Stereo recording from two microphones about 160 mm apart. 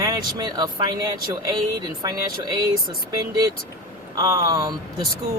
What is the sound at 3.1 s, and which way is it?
Speech, 20° right (ahead or behind).